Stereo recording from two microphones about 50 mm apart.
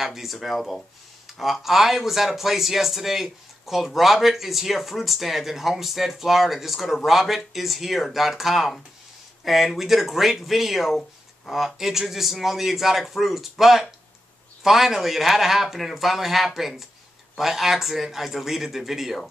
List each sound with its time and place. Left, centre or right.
0.0 s speech: centre